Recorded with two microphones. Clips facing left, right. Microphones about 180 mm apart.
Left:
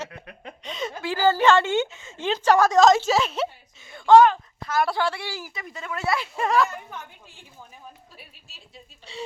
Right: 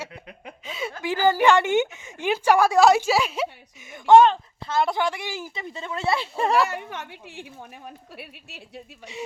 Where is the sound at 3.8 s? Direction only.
20° right (ahead or behind).